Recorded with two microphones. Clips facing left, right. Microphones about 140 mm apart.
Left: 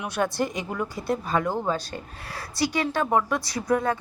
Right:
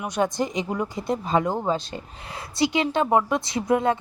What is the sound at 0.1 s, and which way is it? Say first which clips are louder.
Speech: right 2 dB; 20° right (ahead or behind).